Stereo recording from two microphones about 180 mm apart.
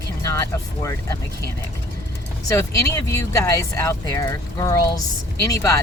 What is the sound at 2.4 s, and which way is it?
Speech, 15° left (ahead or behind).